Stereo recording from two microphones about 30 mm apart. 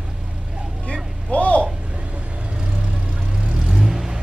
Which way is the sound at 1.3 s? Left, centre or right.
Left.